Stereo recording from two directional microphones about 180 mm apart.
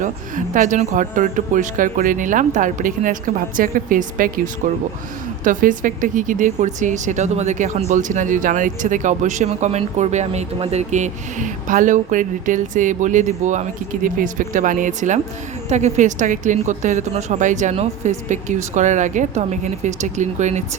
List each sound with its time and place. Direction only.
0.0 s speech: 45° right (ahead or behind)